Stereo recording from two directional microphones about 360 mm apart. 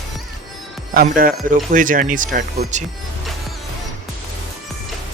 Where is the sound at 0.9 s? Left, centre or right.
Right.